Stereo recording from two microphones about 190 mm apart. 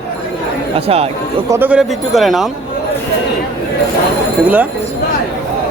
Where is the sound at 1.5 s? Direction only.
10° right (ahead or behind).